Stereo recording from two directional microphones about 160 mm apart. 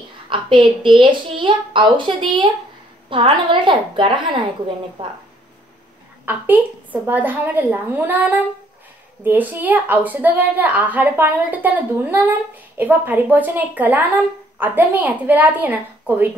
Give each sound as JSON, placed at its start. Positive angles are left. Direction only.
{"t": 0.3, "sound": "a woman's voice", "side_deg": -30}
{"t": 6.2, "sound": "a woman's voice", "side_deg": -10}